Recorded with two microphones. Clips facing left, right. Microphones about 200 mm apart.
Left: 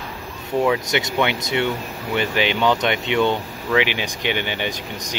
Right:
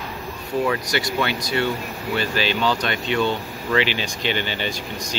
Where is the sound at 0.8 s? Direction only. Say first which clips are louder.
Left 2 dB; 20° left (ahead or behind).